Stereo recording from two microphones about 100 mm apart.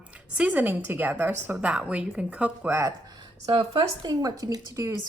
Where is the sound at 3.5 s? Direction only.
60° right (ahead or behind).